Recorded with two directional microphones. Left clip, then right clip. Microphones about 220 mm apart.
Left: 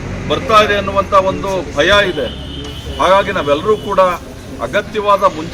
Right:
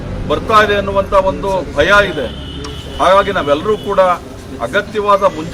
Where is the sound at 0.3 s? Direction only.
20° right (ahead or behind).